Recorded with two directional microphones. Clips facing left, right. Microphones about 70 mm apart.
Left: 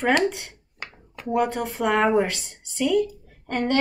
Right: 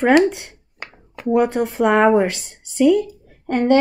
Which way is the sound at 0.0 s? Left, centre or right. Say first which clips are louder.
Right 7 dB; right.